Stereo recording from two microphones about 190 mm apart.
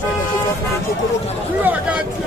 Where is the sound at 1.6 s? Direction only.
5° right (ahead or behind).